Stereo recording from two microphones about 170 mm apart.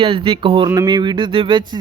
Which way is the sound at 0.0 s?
30° right (ahead or behind).